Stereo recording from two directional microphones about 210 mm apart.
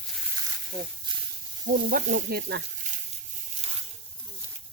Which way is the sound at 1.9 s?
40° right (ahead or behind).